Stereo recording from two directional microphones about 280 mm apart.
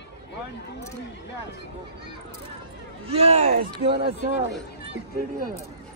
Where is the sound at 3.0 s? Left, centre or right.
Right.